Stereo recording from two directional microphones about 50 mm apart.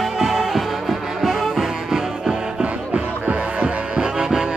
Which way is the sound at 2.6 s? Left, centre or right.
Right.